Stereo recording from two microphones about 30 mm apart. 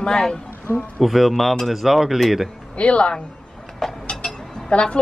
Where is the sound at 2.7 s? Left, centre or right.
Left.